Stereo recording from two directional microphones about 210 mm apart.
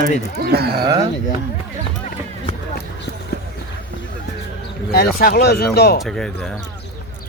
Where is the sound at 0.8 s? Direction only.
20° right (ahead or behind).